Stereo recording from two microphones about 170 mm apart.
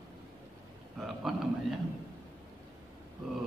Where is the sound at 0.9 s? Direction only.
Centre (ahead or behind).